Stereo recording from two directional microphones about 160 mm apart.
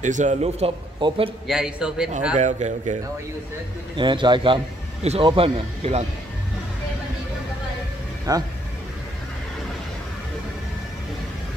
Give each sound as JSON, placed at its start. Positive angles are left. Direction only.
{"t": 0.0, "sound": "a man's voice", "side_deg": -50}
{"t": 1.5, "sound": "a man's voice", "side_deg": -5}
{"t": 2.3, "sound": "a man's voice", "side_deg": -45}
{"t": 3.9, "sound": "a man's voice", "side_deg": -30}
{"t": 8.3, "sound": "a man's voice", "side_deg": -20}